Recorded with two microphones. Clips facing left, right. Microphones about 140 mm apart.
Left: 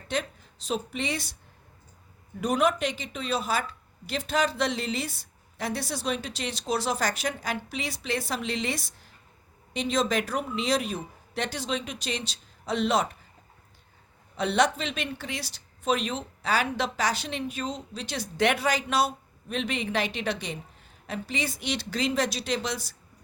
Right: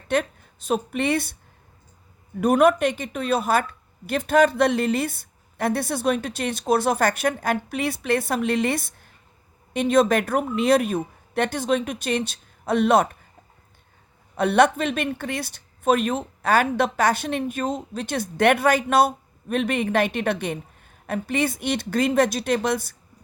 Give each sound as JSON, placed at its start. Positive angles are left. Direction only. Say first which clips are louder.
{"t": 0.1, "sound": "a woman's voice", "louder": "right 7 dB", "side_deg": -55}
{"t": 2.4, "sound": "a woman's voice", "louder": "right 7 dB", "side_deg": -55}
{"t": 14.3, "sound": "a woman's voice", "louder": "right 6 dB", "side_deg": -55}